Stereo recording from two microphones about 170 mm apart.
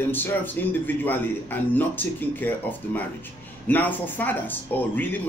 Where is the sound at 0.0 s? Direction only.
10° left (ahead or behind).